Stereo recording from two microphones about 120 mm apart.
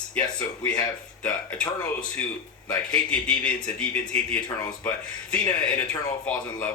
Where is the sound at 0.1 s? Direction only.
10° left (ahead or behind).